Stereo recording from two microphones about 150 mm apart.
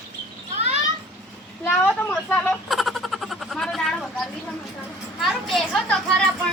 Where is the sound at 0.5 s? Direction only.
45° right (ahead or behind).